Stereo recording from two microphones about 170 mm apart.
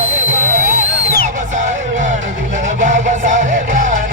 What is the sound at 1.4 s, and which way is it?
Music, 50° right (ahead or behind).